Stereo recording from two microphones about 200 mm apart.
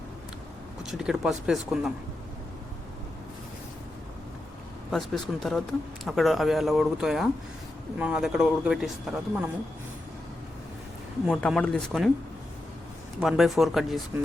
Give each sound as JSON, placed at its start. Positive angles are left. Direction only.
{"t": 0.8, "sound": "speech", "side_deg": -5}
{"t": 4.9, "sound": "speech", "side_deg": 0}
{"t": 11.3, "sound": "speech", "side_deg": 0}
{"t": 13.1, "sound": "speech", "side_deg": 0}